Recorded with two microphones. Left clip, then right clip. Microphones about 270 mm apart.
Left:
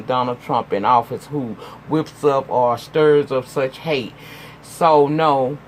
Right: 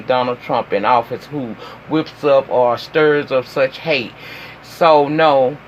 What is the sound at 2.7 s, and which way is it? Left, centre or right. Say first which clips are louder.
Speech: right 1 dB; left.